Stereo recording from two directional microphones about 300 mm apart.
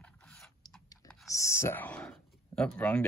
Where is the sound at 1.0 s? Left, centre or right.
Centre.